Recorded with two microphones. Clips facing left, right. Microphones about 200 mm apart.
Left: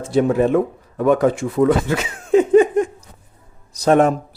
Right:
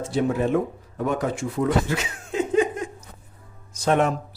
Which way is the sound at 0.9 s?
90° left.